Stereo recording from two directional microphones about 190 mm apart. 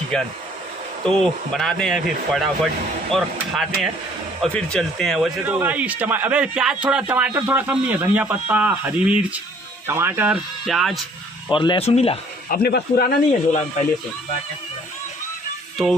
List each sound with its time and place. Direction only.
1.0 s speech: centre (ahead or behind)
5.4 s a man's voice: 10° right (ahead or behind)
11.4 s speech: 25° left (ahead or behind)
12.4 s speech: 55° left (ahead or behind)